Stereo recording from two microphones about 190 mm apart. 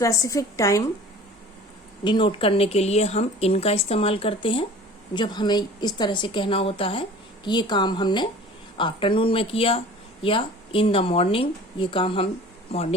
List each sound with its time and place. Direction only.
0.0 s a woman's voice: 15° left (ahead or behind)
2.0 s speech: 25° left (ahead or behind)